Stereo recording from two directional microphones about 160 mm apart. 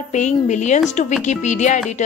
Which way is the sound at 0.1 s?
50° left (ahead or behind).